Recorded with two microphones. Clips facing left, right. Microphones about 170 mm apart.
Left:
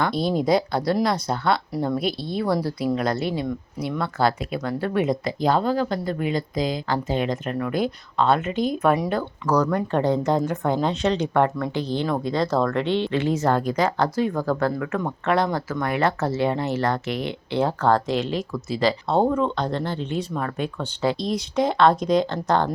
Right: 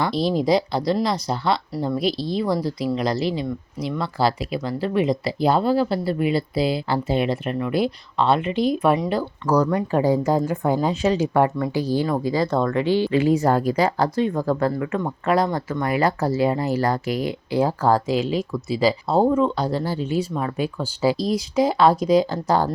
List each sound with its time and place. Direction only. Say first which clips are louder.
0.0 s speech: right 1 dB; centre (ahead or behind)
2.1 s speech: right 1 dB; 55° left (ahead or behind)
3.8 s speech: right 1 dB; 5° left (ahead or behind)
5.4 s speech: right 3 dB; 10° right (ahead or behind)
8.4 s speech: right 3 dB; 45° left (ahead or behind)
8.7 s speech: left 1 dB; 10° right (ahead or behind)